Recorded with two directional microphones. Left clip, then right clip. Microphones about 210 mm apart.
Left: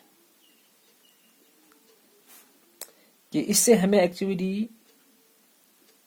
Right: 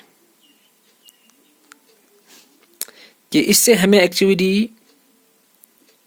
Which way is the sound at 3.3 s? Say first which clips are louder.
Right 7 dB; 35° right (ahead or behind).